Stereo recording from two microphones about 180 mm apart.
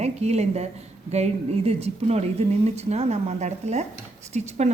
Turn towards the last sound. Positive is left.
turn(degrees=-40)  # may be behind; listen again after turning